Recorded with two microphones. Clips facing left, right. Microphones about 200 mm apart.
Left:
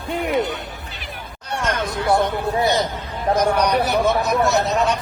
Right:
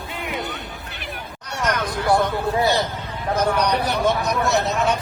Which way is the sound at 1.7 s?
25° left (ahead or behind).